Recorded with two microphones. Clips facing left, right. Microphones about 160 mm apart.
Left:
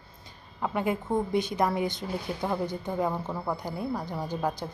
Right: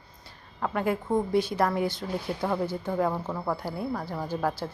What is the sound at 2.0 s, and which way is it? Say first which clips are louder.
Speech: right 1 dB; 15° left (ahead or behind).